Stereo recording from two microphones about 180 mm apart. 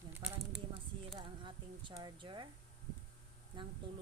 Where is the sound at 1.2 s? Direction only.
25° right (ahead or behind).